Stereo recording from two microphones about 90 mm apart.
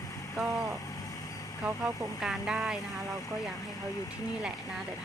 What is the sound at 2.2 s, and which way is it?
Speech, 5° right (ahead or behind).